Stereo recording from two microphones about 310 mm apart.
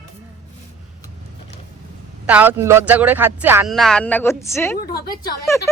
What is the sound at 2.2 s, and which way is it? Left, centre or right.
A man's voice, centre.